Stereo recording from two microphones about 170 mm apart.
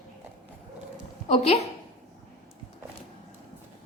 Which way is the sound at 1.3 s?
40° left (ahead or behind).